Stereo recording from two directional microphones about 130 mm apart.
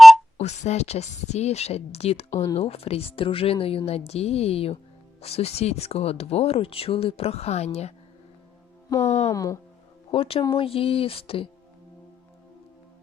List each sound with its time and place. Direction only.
0.3 s speech: 60° left (ahead or behind)
2.3 s speech: 20° left (ahead or behind)
2.6 s speech: 50° left (ahead or behind)
8.9 s speech: 20° left (ahead or behind)
10.1 s speech: 45° left (ahead or behind)